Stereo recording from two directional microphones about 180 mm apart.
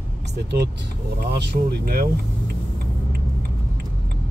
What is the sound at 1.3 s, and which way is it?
Speech, 70° right (ahead or behind).